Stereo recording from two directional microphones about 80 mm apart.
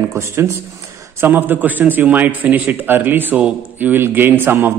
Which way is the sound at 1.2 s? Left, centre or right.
Right.